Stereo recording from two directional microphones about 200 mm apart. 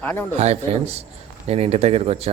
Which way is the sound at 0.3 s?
35° right (ahead or behind).